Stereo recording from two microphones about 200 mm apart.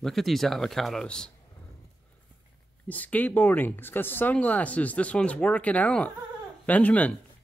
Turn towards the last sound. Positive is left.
turn(degrees=10)  # may be behind; listen again after turning